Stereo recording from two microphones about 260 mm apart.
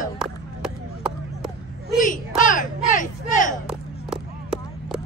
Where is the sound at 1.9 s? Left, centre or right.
Left.